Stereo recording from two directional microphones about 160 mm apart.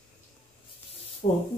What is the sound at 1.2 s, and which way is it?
Speech, 45° left (ahead or behind).